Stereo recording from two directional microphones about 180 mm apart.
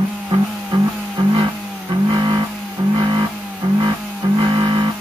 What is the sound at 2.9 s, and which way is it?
Music, 25° right (ahead or behind).